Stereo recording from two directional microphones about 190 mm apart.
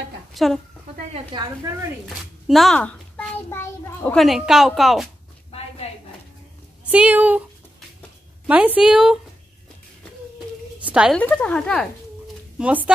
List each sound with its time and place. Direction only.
0.3 s speech: centre (ahead or behind)
1.1 s a woman's voice: 25° right (ahead or behind)
2.4 s a child's voice: centre (ahead or behind)
5.8 s a sound: 35° left (ahead or behind)
6.8 s speech: 5° right (ahead or behind)
8.5 s a woman's voice: 5° right (ahead or behind)
10.8 s a sound: 5° right (ahead or behind)
11.1 s a woman's voice: 5° left (ahead or behind)
12.5 s speech: 5° right (ahead or behind)